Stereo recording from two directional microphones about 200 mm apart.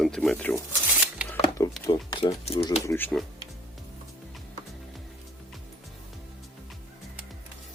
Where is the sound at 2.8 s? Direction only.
10° left (ahead or behind).